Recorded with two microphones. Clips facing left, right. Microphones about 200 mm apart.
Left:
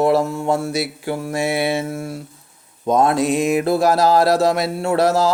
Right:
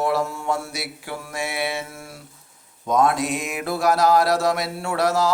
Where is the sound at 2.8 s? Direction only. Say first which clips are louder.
Left 4 dB; 30° left (ahead or behind).